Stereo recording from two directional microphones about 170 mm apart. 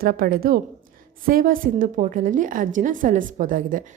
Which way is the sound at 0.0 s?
60° right (ahead or behind).